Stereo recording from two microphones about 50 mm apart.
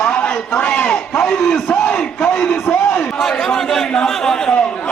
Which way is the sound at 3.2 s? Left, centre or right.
Centre.